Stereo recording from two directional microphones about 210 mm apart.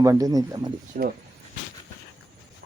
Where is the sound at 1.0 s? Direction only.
40° right (ahead or behind).